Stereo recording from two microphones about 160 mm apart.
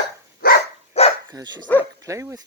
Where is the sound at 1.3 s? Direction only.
25° right (ahead or behind).